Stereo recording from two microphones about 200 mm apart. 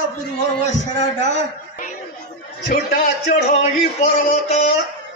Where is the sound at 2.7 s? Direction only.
45° left (ahead or behind).